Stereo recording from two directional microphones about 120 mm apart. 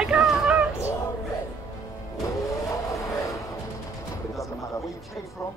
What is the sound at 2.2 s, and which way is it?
Vehicle, 25° left (ahead or behind).